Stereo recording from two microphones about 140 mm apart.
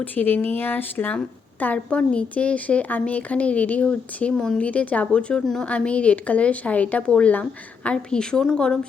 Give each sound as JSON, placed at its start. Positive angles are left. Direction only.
{"t": 0.0, "sound": "speech", "side_deg": 10}